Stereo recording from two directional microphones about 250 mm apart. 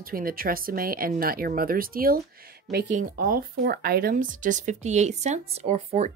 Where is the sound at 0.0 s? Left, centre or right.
Right.